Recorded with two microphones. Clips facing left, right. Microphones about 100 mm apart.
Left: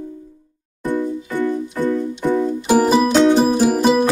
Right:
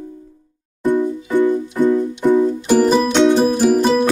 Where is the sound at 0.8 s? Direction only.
15° right (ahead or behind).